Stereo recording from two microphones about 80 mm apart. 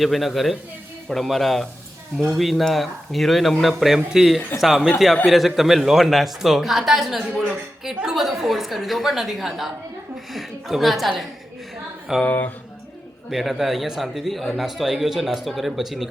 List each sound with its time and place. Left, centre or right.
0.0 s a man's voice: centre
12.2 s speech: left
13.3 s a man's voice: centre